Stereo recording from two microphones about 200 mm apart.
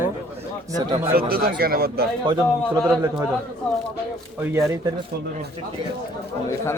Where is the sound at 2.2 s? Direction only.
15° right (ahead or behind).